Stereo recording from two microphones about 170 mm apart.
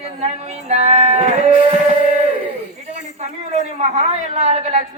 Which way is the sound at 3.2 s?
40° right (ahead or behind).